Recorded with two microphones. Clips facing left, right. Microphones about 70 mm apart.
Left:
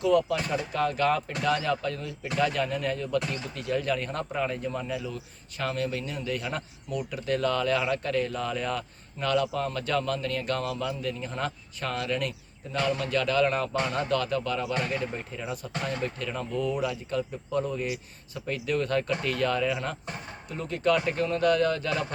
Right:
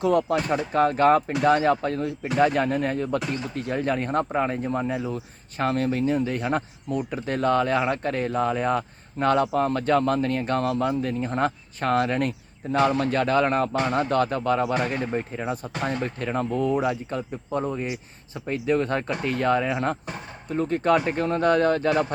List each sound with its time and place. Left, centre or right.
0.0 s speech: right